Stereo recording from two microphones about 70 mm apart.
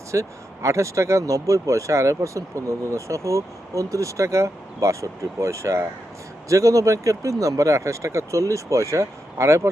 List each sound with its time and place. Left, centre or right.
0.1 s speech: right